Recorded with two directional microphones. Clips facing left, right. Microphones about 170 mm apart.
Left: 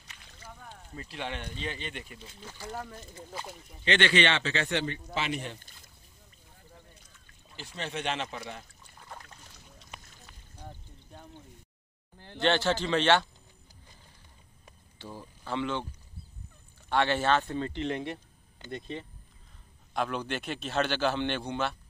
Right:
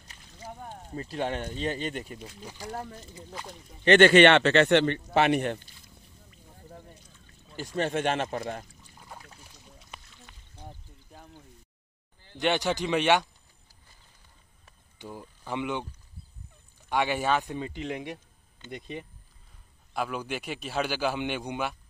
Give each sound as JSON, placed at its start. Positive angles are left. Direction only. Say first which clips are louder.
{"t": 0.1, "sound": "a sound", "louder": "right 7 dB", "side_deg": -40}
{"t": 2.4, "sound": "a man's voice", "louder": "even", "side_deg": -15}
{"t": 3.8, "sound": "speech", "louder": "right 9 dB", "side_deg": -50}
{"t": 7.5, "sound": "speech", "louder": "right 9 dB", "side_deg": -50}
{"t": 9.0, "sound": "rowboat", "louder": "even", "side_deg": -10}
{"t": 10.7, "sound": "a sound", "louder": "even", "side_deg": 0}
{"t": 12.4, "sound": "a man's voice", "louder": "even", "side_deg": -15}
{"t": 15.0, "sound": "speech", "louder": "right 2 dB", "side_deg": -15}
{"t": 16.9, "sound": "a man's voice", "louder": "even", "side_deg": -10}